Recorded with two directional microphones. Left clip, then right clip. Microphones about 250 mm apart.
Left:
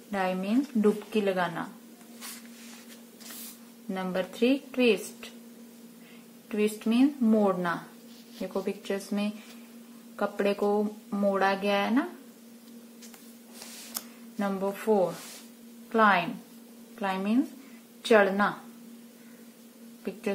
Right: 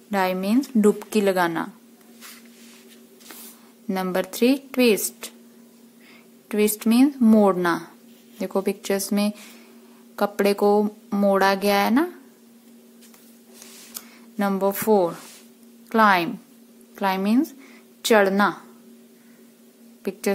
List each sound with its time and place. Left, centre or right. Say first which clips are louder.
0.1 s speech: right 7 dB; right
3.9 s speech: right 7 dB; right
6.5 s speech: right 7 dB; right
14.4 s speech: right 8 dB; right
20.1 s speech: right 8 dB; right